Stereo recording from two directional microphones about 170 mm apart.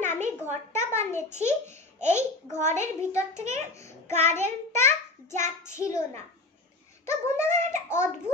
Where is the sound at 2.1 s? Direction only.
15° left (ahead or behind).